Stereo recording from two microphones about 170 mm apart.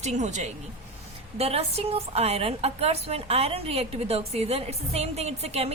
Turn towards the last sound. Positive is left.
turn(degrees=-35)  # may be behind; listen again after turning